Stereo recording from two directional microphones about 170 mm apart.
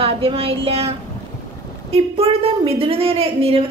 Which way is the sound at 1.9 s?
35° right (ahead or behind).